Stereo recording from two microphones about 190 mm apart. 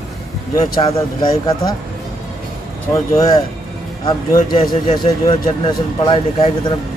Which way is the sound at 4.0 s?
20° left (ahead or behind).